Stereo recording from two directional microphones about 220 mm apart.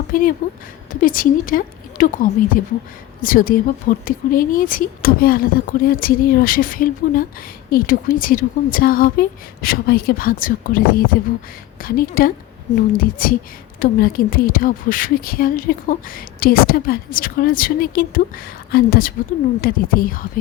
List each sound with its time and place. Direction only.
0.1 s speech: 40° left (ahead or behind)